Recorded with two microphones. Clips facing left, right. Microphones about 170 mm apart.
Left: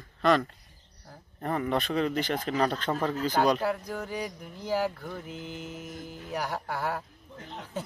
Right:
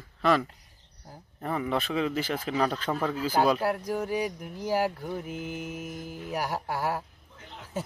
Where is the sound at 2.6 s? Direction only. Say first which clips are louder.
Even; 5° right (ahead or behind).